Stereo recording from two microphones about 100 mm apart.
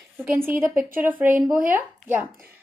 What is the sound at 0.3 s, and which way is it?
Speech, 20° right (ahead or behind).